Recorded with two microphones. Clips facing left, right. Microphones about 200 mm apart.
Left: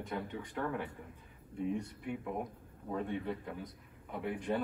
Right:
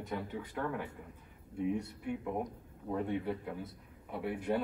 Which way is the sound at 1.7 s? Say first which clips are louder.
Right 2 dB; 10° right (ahead or behind).